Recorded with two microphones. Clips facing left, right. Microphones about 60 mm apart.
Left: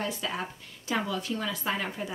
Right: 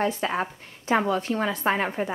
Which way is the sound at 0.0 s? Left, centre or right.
Right.